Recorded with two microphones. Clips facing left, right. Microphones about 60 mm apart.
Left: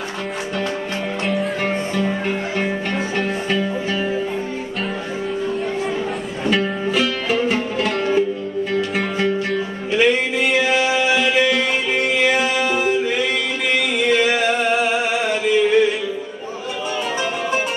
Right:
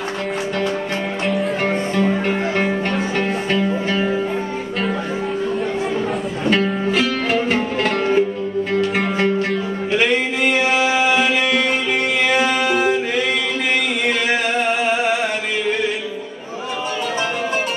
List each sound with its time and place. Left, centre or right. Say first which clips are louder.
1.2 s music: right 1 dB; centre
1.7 s music: right 3 dB; centre
10.7 s music: right 1 dB; centre
14.0 s music: left 5 dB; right